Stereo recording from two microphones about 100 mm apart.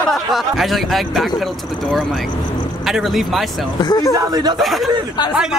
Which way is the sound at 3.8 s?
40° left (ahead or behind).